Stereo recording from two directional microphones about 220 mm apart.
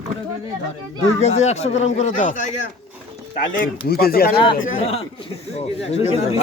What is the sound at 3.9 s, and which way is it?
Speech, 45° left (ahead or behind).